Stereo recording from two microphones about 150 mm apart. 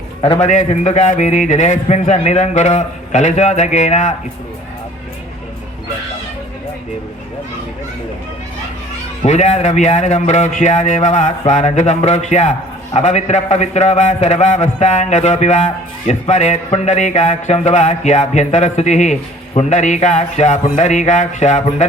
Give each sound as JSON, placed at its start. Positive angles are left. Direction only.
{"t": 0.3, "sound": "speech", "side_deg": 55}
{"t": 9.2, "sound": "speech", "side_deg": 50}